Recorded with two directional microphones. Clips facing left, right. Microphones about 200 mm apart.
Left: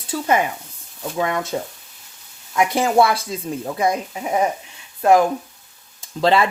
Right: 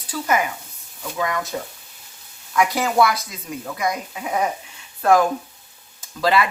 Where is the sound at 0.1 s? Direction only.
30° left (ahead or behind).